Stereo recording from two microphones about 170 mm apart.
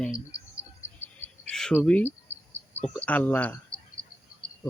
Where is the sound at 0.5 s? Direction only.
15° left (ahead or behind).